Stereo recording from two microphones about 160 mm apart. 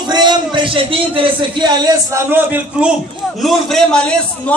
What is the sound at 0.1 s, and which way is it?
A man's voice, 30° right (ahead or behind).